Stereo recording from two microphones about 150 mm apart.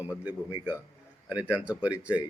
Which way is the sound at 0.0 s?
10° right (ahead or behind).